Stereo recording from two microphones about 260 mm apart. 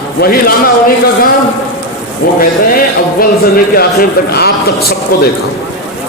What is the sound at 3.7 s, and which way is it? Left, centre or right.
A man's voice, left.